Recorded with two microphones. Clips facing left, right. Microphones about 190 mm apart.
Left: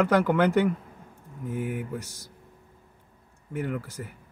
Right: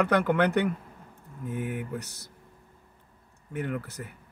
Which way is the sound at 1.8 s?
15° right (ahead or behind).